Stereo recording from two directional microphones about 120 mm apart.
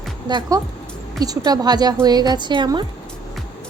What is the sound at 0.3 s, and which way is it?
A woman's voice, 35° right (ahead or behind).